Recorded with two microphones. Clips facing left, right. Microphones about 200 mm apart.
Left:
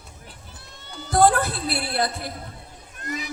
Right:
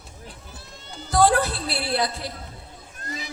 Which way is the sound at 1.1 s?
55° left (ahead or behind).